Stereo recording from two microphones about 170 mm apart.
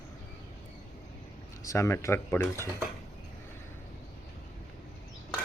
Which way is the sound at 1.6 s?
20° left (ahead or behind).